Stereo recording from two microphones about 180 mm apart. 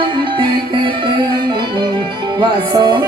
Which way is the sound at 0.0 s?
30° right (ahead or behind).